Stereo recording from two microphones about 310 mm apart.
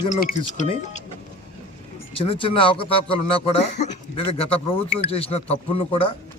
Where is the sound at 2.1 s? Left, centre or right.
Centre.